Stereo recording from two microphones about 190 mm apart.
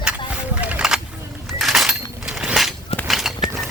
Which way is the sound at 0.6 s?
5° right (ahead or behind).